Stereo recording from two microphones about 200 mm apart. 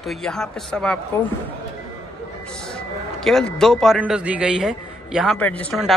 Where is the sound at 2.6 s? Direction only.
5° left (ahead or behind).